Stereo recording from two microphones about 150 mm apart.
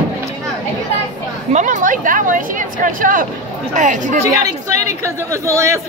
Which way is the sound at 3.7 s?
55° right (ahead or behind).